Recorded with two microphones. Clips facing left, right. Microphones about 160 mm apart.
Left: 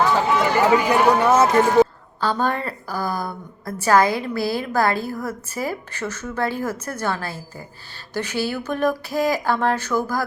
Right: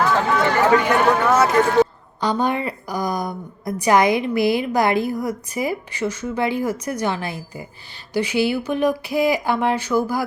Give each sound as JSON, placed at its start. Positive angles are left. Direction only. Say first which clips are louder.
{"t": 0.1, "sound": "run", "louder": "even", "side_deg": 10}
{"t": 2.2, "sound": "a woman's voice", "louder": "right 2 dB", "side_deg": -15}